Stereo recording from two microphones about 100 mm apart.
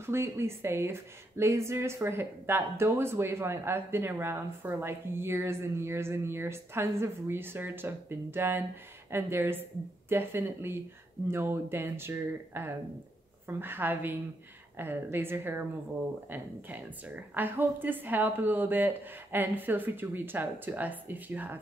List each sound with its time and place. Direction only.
0.0 s speech: 25° right (ahead or behind)